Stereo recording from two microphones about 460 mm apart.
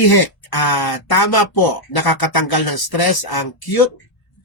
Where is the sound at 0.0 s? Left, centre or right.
Left.